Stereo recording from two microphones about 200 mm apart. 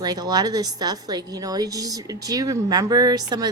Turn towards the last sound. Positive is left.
turn(degrees=-20)  # may be behind; listen again after turning